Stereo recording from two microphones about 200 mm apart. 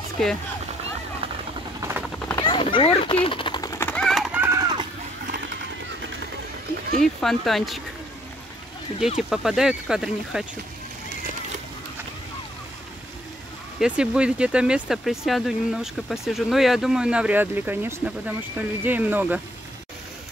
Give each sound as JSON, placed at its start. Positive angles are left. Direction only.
{"t": 0.2, "sound": "speech", "side_deg": 5}
{"t": 1.8, "sound": "a sound", "side_deg": -10}
{"t": 2.3, "sound": "a sound", "side_deg": 25}
{"t": 7.2, "sound": "speech", "side_deg": 0}
{"t": 9.3, "sound": "speech", "side_deg": 0}
{"t": 13.7, "sound": "speech", "side_deg": -5}